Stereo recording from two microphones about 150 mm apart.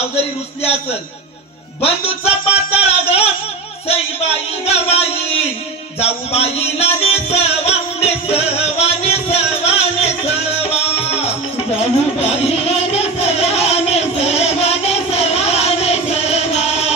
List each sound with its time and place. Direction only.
1.8 s music: 40° left (ahead or behind)
3.8 s a sound: 40° left (ahead or behind)
5.9 s music: 45° left (ahead or behind)